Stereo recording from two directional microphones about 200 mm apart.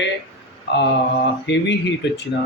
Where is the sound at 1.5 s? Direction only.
60° left (ahead or behind).